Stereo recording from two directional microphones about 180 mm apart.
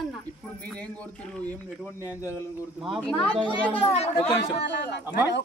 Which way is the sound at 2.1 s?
15° left (ahead or behind).